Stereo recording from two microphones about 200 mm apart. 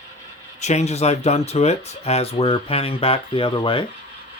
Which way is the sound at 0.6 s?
35° left (ahead or behind).